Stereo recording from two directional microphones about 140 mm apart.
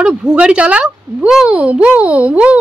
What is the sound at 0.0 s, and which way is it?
Speech, 5° right (ahead or behind).